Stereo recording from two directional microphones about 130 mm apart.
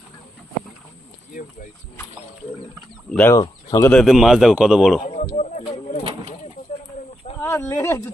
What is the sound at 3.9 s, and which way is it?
Speech, centre (ahead or behind).